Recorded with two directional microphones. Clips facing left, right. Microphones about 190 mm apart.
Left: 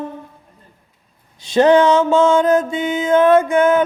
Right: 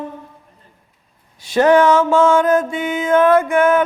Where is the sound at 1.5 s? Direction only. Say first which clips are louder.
Left 1 dB; 20° left (ahead or behind).